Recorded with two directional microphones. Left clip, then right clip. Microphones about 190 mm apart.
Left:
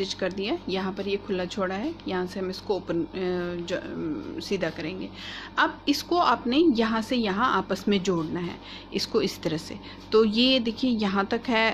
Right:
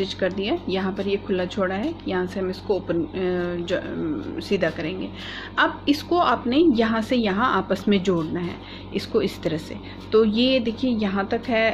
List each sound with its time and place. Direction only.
0.4 s a woman's voice: 10° left (ahead or behind)